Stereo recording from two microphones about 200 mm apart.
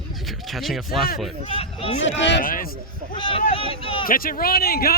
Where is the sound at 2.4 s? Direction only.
45° left (ahead or behind).